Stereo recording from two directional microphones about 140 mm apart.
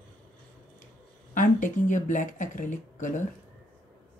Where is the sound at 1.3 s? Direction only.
65° left (ahead or behind).